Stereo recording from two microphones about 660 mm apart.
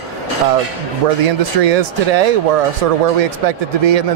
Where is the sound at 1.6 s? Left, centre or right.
Right.